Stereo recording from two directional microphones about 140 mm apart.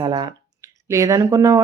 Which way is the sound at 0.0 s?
30° right (ahead or behind).